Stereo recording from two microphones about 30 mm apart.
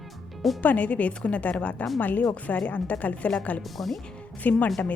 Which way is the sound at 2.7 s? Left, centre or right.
Left.